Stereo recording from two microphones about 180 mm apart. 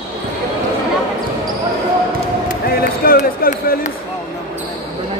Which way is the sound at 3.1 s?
55° left (ahead or behind).